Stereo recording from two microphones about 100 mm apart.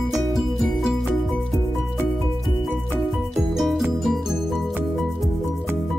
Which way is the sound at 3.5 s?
5° right (ahead or behind).